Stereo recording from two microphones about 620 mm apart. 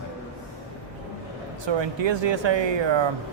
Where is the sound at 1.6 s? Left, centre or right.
Right.